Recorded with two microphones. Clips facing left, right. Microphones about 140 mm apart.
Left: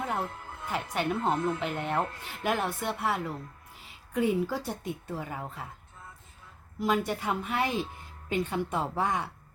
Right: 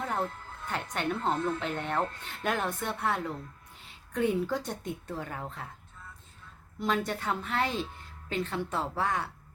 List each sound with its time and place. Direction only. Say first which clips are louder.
0.1 s speech: even; 5° left (ahead or behind)
1.3 s speech: even; 20° left (ahead or behind)
1.5 s speech: left 1 dB; 5° left (ahead or behind)
6.7 s speech: left 2 dB; 10° left (ahead or behind)